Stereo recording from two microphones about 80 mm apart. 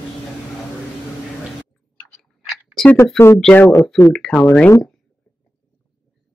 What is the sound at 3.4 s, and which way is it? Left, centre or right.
Speech, centre.